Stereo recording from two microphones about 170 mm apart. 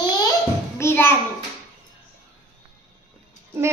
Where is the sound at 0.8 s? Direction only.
15° left (ahead or behind).